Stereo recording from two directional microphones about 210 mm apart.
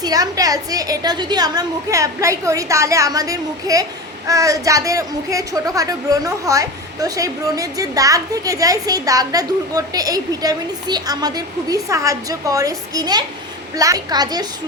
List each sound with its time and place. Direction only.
0.0 s a woman's voice: 15° right (ahead or behind)